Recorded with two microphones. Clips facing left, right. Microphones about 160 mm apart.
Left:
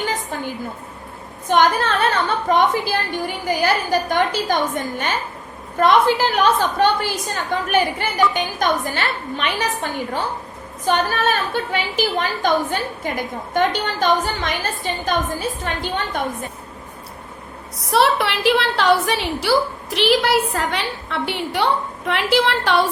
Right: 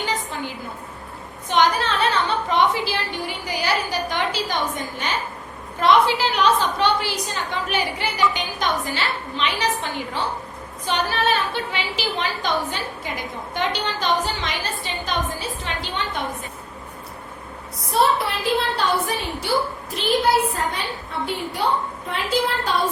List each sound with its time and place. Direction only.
0.0 s a sound: 50° left (ahead or behind)
1.5 s a woman's voice: 50° left (ahead or behind)
10.8 s a woman's voice: 45° left (ahead or behind)
17.9 s a woman's voice: 80° left